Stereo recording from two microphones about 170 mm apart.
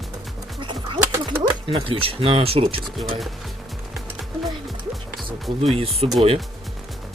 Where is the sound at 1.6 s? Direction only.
30° right (ahead or behind).